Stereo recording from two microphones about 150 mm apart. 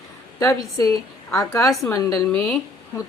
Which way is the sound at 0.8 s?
25° left (ahead or behind).